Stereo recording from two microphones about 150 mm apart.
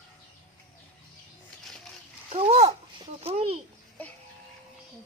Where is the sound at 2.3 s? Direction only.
45° right (ahead or behind).